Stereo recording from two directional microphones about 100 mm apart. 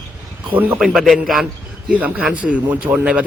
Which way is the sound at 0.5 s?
15° right (ahead or behind).